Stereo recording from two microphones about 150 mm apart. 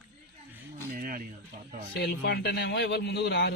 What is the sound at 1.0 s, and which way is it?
Speech, 70° right (ahead or behind).